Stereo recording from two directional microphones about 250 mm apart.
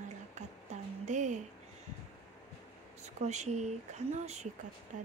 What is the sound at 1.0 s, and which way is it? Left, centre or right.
Speech, right.